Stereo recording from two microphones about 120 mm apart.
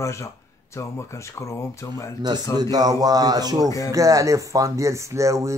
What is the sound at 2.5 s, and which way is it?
Speech, 35° right (ahead or behind).